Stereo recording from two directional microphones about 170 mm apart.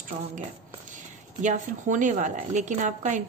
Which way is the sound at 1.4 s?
45° right (ahead or behind).